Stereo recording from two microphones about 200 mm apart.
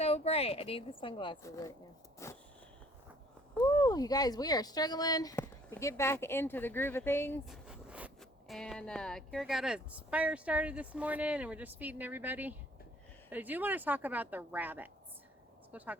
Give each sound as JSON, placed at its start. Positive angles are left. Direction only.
{"t": 0.0, "sound": "a woman's voice", "side_deg": 30}
{"t": 1.4, "sound": "speech", "side_deg": 15}
{"t": 2.1, "sound": "a sound", "side_deg": 15}
{"t": 3.6, "sound": "speech", "side_deg": 20}
{"t": 7.4, "sound": "a woman's voice", "side_deg": 0}